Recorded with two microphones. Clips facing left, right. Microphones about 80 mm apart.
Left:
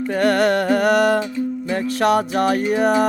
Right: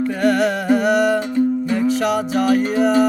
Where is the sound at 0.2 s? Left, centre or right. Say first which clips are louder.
Left 2 dB; left.